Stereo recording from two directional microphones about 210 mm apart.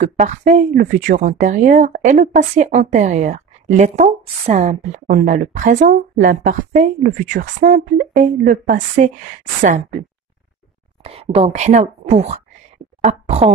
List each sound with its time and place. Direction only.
0.0 s speech: 35° right (ahead or behind)
11.1 s a woman's voice: 30° right (ahead or behind)